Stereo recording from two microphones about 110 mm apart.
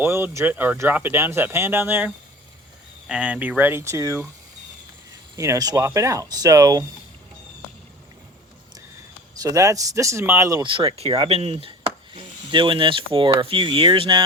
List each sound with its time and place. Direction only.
0.0 s speech: 20° right (ahead or behind)
5.4 s speech: 35° right (ahead or behind)
9.4 s speech: 30° right (ahead or behind)
10.6 s speech: 50° right (ahead or behind)